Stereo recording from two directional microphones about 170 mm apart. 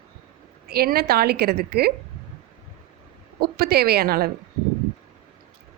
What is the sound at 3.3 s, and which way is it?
Speech, 65° right (ahead or behind).